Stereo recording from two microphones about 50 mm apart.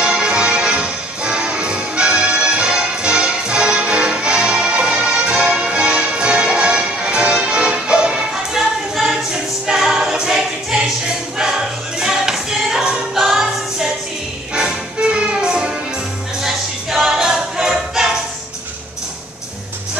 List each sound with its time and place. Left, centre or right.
0.0 s music: centre
8.5 s a capella: centre
12.0 s choir: centre
14.5 s music: centre
16.3 s music: centre